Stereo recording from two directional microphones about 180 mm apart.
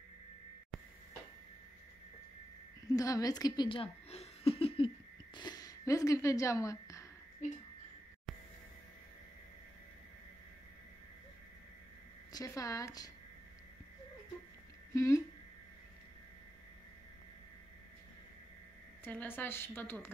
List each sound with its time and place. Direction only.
2.9 s a sound: 20° left (ahead or behind)
7.4 s speech: 45° left (ahead or behind)
12.3 s speech: 20° left (ahead or behind)
15.0 s a woman's voice: 15° left (ahead or behind)
19.0 s a woman's voice: 10° left (ahead or behind)